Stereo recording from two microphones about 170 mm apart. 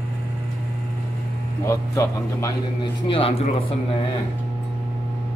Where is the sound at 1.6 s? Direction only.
15° left (ahead or behind).